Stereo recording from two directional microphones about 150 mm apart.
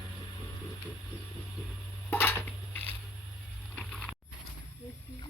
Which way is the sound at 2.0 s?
15° left (ahead or behind).